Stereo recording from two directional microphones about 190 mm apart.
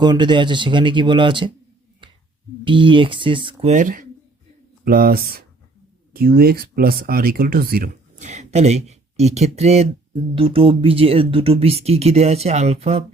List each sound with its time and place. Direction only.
0.0 s speech: 25° right (ahead or behind)
2.0 s a sound: 25° right (ahead or behind)
2.6 s speech: 25° right (ahead or behind)
3.7 s speech: 40° right (ahead or behind)